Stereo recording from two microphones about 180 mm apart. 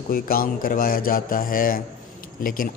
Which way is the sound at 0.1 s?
55° left (ahead or behind).